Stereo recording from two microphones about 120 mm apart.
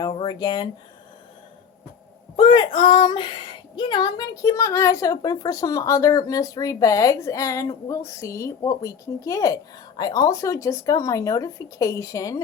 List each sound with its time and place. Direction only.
0.1 s a sound: 45° left (ahead or behind)
0.3 s speech: 35° left (ahead or behind)
2.3 s a woman's voice: 45° left (ahead or behind); by 12.4 s 30° left (ahead or behind)